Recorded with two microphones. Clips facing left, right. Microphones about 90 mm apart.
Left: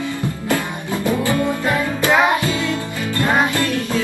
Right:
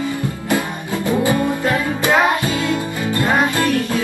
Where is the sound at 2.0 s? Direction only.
20° right (ahead or behind).